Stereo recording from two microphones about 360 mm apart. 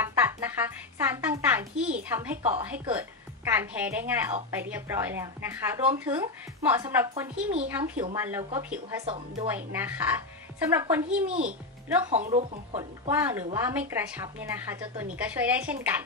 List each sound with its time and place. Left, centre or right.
0.0 s music: centre
2.6 s speech: centre
9.0 s speech: centre
9.5 s speech: centre
12.1 s speech: centre
13.1 s speech: centre